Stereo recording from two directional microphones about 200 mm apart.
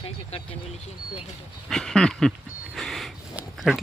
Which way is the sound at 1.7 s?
5° left (ahead or behind).